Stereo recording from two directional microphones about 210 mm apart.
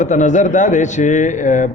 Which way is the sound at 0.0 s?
35° left (ahead or behind).